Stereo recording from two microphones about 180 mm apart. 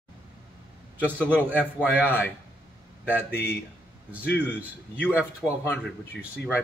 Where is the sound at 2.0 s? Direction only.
10° left (ahead or behind).